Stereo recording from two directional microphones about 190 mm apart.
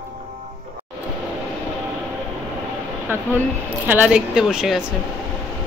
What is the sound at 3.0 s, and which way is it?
Speech, 10° right (ahead or behind).